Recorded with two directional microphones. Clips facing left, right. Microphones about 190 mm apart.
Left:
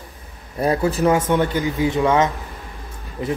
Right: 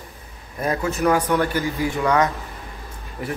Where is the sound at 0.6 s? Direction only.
35° left (ahead or behind).